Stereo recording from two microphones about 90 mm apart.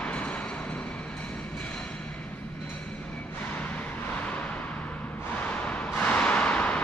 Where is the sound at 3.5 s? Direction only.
15° left (ahead or behind).